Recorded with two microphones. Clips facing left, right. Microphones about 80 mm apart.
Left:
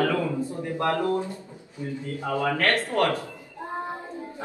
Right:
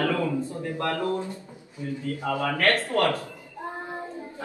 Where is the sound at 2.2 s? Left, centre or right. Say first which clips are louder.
Even; left.